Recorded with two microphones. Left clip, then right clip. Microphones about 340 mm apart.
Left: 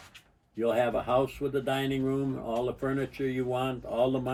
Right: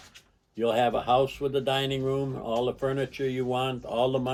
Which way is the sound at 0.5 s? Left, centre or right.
Centre.